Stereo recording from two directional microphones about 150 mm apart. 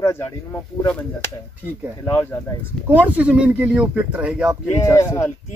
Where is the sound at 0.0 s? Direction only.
15° left (ahead or behind).